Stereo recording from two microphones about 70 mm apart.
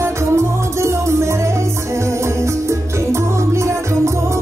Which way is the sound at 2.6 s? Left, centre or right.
Right.